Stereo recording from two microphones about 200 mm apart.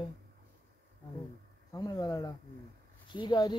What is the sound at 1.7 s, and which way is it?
Speech, 20° left (ahead or behind).